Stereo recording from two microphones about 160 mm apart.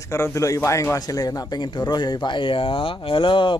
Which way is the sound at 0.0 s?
20° left (ahead or behind).